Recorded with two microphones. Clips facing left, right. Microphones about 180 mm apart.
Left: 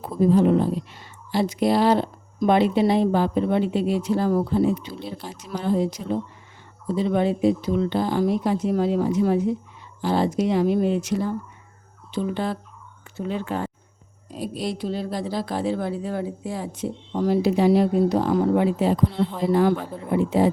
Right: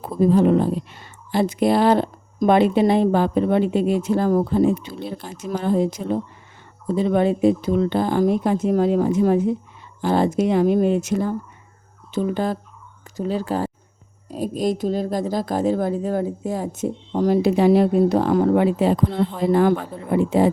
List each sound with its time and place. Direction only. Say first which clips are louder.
0.3 s speech: right 2 dB; 55° right (ahead or behind)
19.5 s speech: right 2 dB; 55° right (ahead or behind)